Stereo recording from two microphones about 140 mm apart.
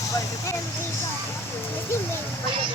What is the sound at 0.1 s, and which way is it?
Speech, 20° left (ahead or behind).